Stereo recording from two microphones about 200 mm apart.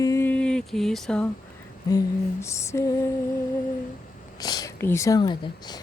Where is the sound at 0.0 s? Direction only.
15° left (ahead or behind).